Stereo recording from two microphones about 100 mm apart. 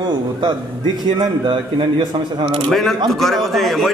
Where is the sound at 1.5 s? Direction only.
60° right (ahead or behind).